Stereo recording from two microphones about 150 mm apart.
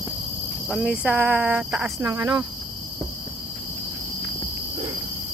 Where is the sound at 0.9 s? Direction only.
15° right (ahead or behind).